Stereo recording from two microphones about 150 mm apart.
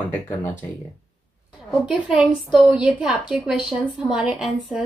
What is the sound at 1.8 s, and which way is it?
A woman's voice, 5° right (ahead or behind).